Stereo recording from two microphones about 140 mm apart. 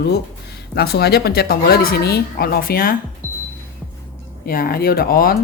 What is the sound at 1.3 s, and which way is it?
A woman's voice, 90° left.